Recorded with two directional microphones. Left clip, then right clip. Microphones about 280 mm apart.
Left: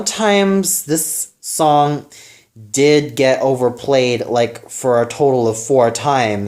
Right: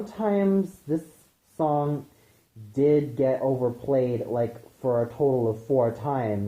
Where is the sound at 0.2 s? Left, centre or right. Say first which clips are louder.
Left 10 dB; left.